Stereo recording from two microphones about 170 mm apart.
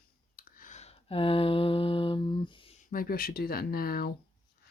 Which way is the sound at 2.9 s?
60° left (ahead or behind).